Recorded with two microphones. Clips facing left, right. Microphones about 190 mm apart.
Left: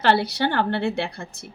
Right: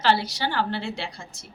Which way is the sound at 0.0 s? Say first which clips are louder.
Left 3 dB; 60° left (ahead or behind).